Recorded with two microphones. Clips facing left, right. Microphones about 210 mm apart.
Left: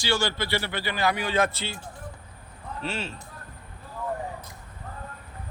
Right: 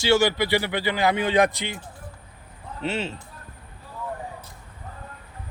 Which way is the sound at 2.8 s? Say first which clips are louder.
Right 5 dB; 20° right (ahead or behind).